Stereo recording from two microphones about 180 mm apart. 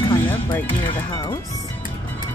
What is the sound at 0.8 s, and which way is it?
Speech, 20° left (ahead or behind).